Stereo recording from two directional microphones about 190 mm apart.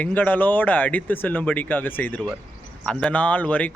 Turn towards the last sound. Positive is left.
turn(degrees=10)  # may be behind; listen again after turning